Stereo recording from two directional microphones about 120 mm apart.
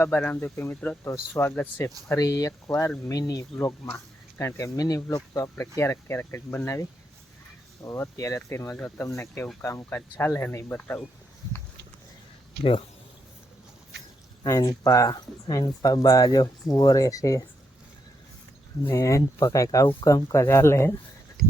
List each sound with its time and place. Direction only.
0.0 s speech: 15° left (ahead or behind)
7.9 s speech: 25° left (ahead or behind)
8.7 s speech: 10° left (ahead or behind)
9.1 s speech: 20° left (ahead or behind)
14.4 s speech: 30° left (ahead or behind)
18.9 s speech: 25° left (ahead or behind)